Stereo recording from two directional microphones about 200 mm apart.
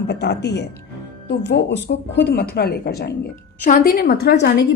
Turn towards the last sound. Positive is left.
turn(degrees=55)  # may be behind; listen again after turning